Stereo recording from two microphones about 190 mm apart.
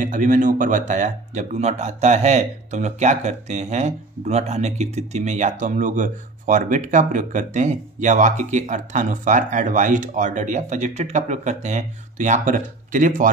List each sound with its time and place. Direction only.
0.0 s speech: 45° right (ahead or behind)